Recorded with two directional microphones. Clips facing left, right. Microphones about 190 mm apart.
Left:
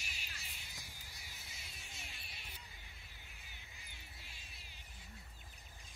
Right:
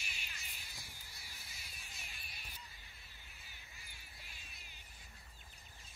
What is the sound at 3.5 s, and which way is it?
Music, 20° left (ahead or behind).